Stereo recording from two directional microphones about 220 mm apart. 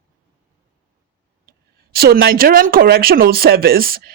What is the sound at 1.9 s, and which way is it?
Speech, 45° right (ahead or behind).